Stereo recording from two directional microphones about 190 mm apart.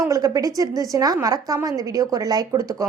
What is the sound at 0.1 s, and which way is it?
A woman's voice, 20° right (ahead or behind).